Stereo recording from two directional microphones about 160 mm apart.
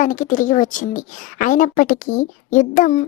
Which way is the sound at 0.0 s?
55° left (ahead or behind).